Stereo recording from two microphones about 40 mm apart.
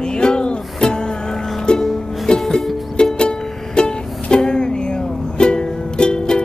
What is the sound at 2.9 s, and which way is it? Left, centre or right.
Music, left.